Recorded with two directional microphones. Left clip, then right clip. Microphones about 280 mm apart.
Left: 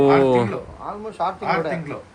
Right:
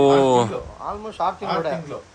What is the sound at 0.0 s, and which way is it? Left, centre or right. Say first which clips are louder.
Speech: even; centre.